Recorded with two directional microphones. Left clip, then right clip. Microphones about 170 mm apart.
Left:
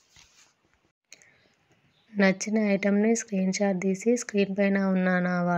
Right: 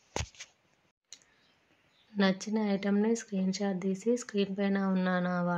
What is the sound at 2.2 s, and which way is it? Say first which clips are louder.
Speech: left 6 dB; 25° left (ahead or behind).